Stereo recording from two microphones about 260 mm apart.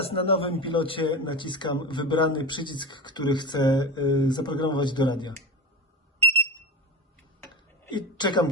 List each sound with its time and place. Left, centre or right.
0.0 s speech: left
7.9 s a woman's voice: centre